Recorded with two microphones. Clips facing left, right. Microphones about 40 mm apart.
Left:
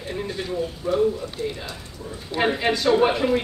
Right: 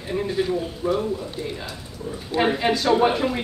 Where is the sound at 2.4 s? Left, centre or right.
Centre.